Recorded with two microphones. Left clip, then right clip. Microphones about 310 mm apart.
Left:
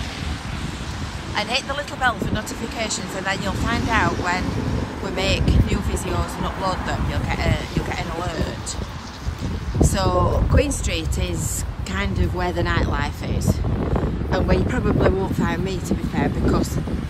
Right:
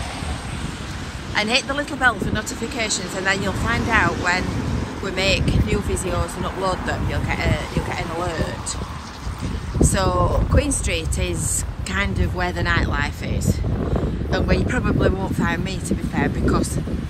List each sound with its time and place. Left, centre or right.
1.3 s speech: centre
4.4 s vehicle: right
5.1 s speech: centre
9.8 s speech: centre